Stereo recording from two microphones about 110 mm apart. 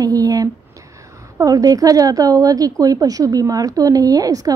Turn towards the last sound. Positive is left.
turn(degrees=-35)  # may be behind; listen again after turning